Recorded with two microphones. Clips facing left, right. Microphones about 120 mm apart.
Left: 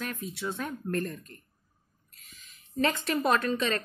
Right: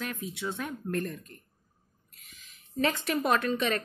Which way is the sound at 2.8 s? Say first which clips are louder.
Left 1 dB; 5° right (ahead or behind).